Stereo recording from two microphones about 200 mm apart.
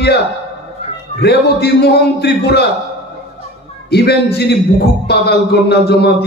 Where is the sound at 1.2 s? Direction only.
55° left (ahead or behind).